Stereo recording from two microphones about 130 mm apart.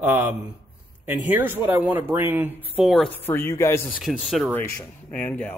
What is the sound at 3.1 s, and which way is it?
Speech, 15° left (ahead or behind).